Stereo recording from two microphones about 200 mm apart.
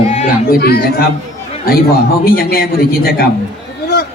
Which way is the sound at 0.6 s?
55° left (ahead or behind).